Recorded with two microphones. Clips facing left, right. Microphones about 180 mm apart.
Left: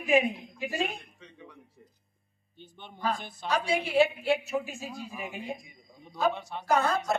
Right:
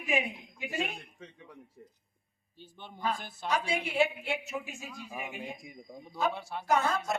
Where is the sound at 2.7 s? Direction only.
5° right (ahead or behind).